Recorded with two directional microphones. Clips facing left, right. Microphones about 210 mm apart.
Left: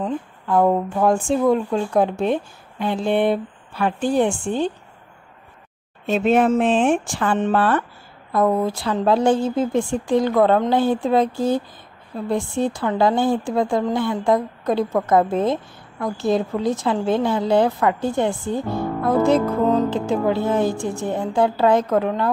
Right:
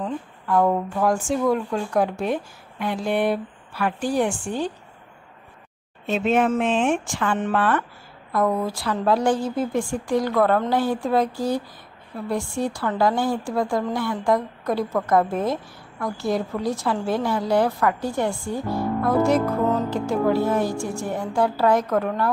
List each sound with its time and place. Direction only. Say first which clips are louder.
0.0 s speech: left 3 dB; 25° left (ahead or behind)
6.0 s speech: left 3 dB; 40° left (ahead or behind); by 22.3 s 20° left (ahead or behind)